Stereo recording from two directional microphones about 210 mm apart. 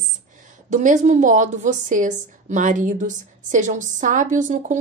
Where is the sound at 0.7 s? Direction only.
35° right (ahead or behind).